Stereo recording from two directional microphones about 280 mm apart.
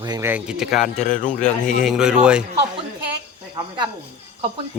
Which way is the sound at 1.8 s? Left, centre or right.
Centre.